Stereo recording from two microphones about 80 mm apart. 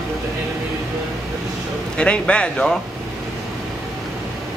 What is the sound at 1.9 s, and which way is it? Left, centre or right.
Speech, centre.